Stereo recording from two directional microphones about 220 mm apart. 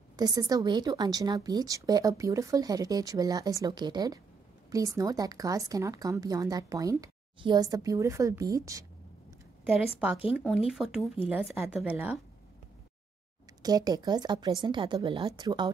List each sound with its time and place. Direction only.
0.1 s speech: 15° right (ahead or behind)
10.7 s speech: centre (ahead or behind)
13.6 s a woman's voice: 15° right (ahead or behind)